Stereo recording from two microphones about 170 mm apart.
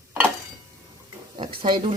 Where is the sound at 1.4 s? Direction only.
30° right (ahead or behind).